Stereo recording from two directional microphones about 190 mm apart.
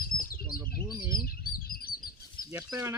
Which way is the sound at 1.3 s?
50° left (ahead or behind).